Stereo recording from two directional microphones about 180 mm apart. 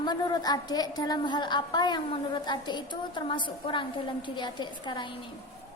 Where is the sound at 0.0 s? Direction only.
25° left (ahead or behind).